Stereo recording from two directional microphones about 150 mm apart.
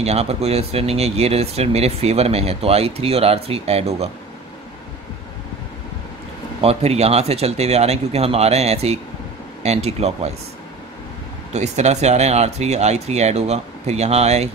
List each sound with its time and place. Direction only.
0.0 s speech: 45° right (ahead or behind)
6.6 s speech: 40° right (ahead or behind)
11.5 s speech: 50° right (ahead or behind)